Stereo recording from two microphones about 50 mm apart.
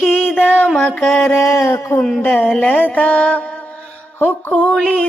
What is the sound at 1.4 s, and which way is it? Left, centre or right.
Speech, left.